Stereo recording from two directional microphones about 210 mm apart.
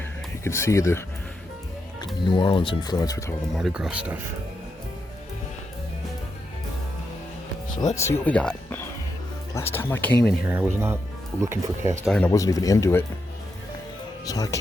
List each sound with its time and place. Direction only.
0.4 s speech: 15° left (ahead or behind)
2.2 s speech: 20° left (ahead or behind)
3.5 s speech: centre (ahead or behind)
7.8 s speech: 15° left (ahead or behind)
10.4 s speech: 5° right (ahead or behind)
12.0 s speech: 5° left (ahead or behind)
12.3 s speech: 15° left (ahead or behind)
14.3 s speech: 15° left (ahead or behind)